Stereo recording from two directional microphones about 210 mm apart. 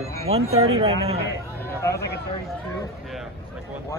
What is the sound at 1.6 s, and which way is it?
Speech, 15° left (ahead or behind).